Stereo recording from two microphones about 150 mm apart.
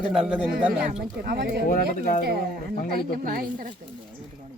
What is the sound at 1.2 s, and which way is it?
Speech, 90° right.